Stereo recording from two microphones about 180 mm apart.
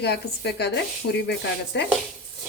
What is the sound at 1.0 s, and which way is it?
Speech, 85° left.